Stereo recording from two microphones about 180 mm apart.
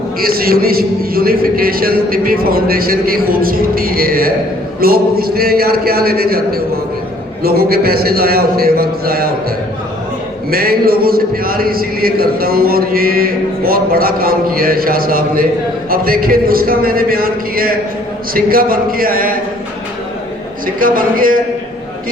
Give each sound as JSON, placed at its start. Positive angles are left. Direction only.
{"t": 0.2, "sound": "a man's voice", "side_deg": -55}
{"t": 10.5, "sound": "a man's voice", "side_deg": -55}
{"t": 20.7, "sound": "speech", "side_deg": -50}